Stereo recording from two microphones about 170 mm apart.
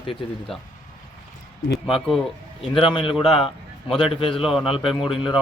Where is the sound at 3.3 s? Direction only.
30° left (ahead or behind).